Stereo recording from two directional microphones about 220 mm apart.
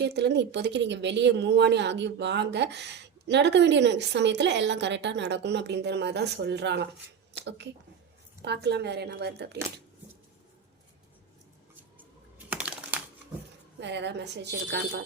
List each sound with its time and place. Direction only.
0.0 s a woman's voice: 50° right (ahead or behind)
8.4 s a woman's voice: 50° right (ahead or behind)
12.5 s computer keyboard: 5° right (ahead or behind)
13.7 s a woman's voice: 50° right (ahead or behind)